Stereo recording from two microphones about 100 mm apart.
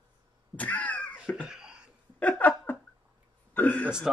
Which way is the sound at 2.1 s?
15° left (ahead or behind).